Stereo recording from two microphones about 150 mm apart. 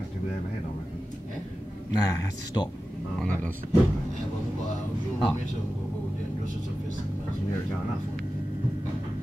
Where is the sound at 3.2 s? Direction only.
10° left (ahead or behind).